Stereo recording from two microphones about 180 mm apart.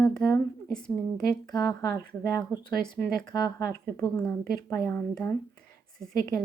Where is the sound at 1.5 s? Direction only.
20° left (ahead or behind).